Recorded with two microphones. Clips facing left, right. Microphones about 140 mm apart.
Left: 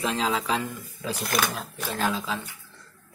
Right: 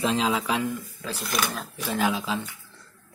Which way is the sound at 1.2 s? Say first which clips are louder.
Left 2 dB; 45° left (ahead or behind).